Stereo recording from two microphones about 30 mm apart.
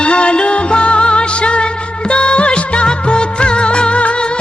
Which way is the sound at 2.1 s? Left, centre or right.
Left.